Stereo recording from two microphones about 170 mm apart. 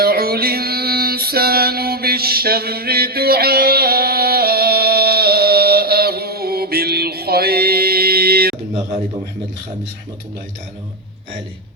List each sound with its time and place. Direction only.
0.0 s music: 65° right (ahead or behind)